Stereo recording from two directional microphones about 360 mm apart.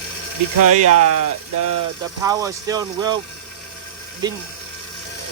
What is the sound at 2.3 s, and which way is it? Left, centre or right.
Speech, centre.